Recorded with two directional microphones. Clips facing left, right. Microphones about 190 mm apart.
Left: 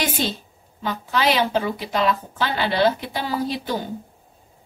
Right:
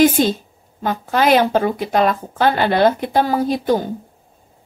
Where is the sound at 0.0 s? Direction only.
45° right (ahead or behind).